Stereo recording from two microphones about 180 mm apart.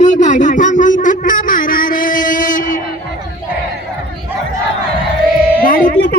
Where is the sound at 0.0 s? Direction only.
40° left (ahead or behind).